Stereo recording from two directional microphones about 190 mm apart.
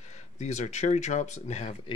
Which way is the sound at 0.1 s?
35° left (ahead or behind).